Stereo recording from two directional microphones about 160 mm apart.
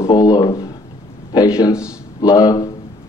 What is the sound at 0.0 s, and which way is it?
Speech, 20° left (ahead or behind).